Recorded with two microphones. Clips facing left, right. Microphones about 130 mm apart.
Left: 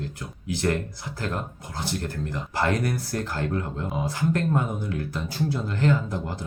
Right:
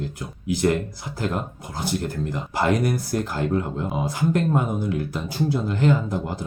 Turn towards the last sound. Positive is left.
turn(degrees=-15)  # may be behind; listen again after turning